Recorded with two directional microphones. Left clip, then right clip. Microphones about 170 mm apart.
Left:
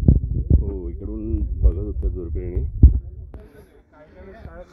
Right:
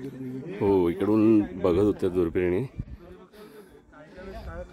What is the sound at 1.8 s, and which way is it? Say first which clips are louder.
Speech: right 8 dB; 20° right (ahead or behind).